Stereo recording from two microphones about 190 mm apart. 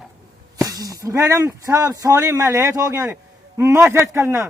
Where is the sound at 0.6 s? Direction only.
20° right (ahead or behind).